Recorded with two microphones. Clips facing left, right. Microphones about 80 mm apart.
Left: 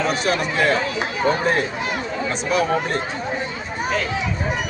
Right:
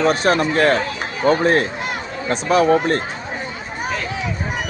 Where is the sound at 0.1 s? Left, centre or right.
Right.